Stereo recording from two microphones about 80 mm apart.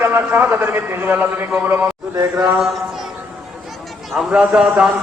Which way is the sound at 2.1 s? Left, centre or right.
Right.